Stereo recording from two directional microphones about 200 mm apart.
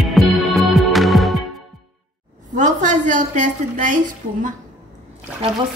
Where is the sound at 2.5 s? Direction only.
40° right (ahead or behind).